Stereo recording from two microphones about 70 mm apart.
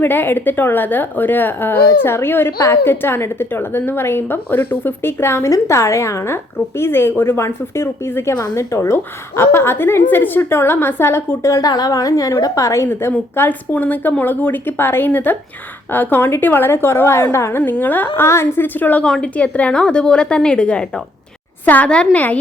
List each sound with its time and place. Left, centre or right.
0.0 s a woman's voice: left
11.6 s a woman's voice: left
12.9 s a woman's voice: left
17.6 s a woman's voice: left
18.3 s a woman's voice: left
19.0 s a woman's voice: centre